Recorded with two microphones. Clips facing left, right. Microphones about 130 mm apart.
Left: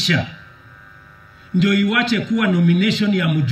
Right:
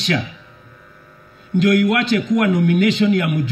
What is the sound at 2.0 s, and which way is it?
Speech, 50° right (ahead or behind).